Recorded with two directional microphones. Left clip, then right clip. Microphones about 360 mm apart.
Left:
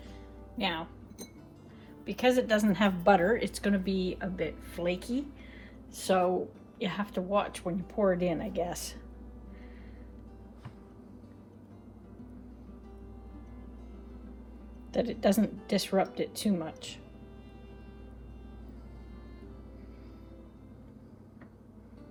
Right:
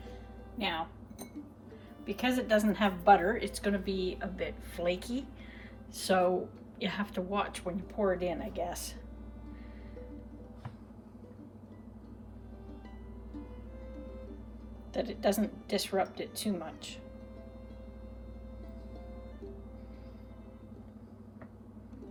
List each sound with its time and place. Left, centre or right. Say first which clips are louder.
0.6 s a woman's voice: left 1 dB; left
2.0 s a woman's voice: left 4 dB; left
14.9 s speech: left 3 dB; centre